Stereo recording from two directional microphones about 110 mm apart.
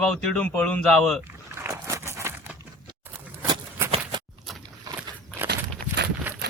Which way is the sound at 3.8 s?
25° right (ahead or behind).